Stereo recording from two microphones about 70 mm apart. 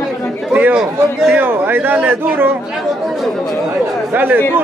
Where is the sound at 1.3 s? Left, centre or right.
Right.